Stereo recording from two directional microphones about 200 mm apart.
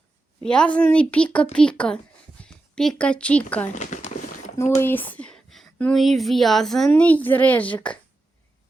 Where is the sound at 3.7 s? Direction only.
35° left (ahead or behind).